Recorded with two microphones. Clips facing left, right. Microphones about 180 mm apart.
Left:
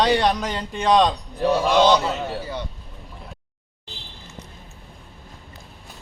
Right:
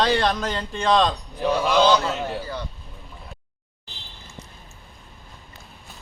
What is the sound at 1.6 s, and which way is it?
Speech, centre (ahead or behind).